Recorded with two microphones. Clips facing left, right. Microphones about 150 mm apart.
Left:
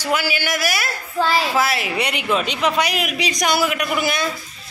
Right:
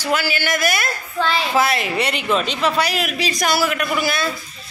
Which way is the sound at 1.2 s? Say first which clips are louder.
Left 2 dB; 40° left (ahead or behind).